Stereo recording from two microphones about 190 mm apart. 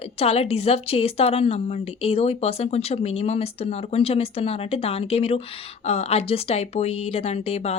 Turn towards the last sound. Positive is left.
turn(degrees=35)  # may be behind; listen again after turning